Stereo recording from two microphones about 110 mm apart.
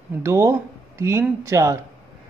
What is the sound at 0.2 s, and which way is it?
A man's voice, 25° right (ahead or behind).